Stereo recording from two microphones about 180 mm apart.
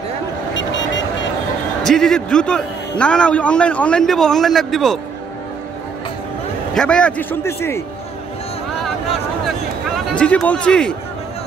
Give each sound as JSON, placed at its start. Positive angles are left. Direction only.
{"t": 0.6, "sound": "vehicle", "side_deg": 90}
{"t": 1.8, "sound": "a man's voice", "side_deg": 5}
{"t": 6.7, "sound": "a man's voice", "side_deg": 5}
{"t": 10.1, "sound": "a man's voice", "side_deg": 5}